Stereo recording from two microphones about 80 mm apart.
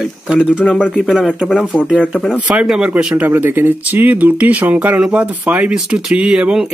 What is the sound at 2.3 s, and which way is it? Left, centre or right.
Speech, centre.